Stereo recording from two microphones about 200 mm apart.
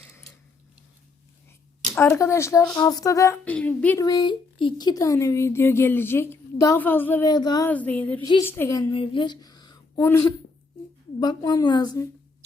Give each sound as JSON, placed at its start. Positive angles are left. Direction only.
{"t": 2.0, "sound": "speech", "side_deg": 15}
{"t": 4.0, "sound": "speech", "side_deg": 20}
{"t": 7.3, "sound": "a woman's voice", "side_deg": 20}
{"t": 7.7, "sound": "speech", "side_deg": 10}
{"t": 8.9, "sound": "a sound", "side_deg": 25}
{"t": 10.0, "sound": "a woman's voice", "side_deg": 15}